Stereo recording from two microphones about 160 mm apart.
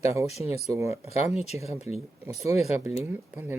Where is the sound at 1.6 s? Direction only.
40° left (ahead or behind).